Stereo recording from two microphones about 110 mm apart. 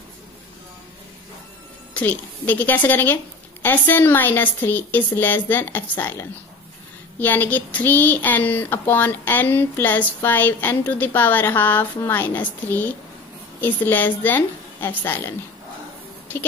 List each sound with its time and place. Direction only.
2.0 s a woman's voice: 15° left (ahead or behind)